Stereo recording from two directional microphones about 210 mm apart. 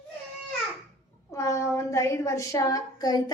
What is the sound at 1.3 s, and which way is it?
A woman's voice, 15° left (ahead or behind).